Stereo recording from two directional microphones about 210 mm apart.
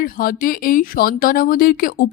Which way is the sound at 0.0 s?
45° left (ahead or behind).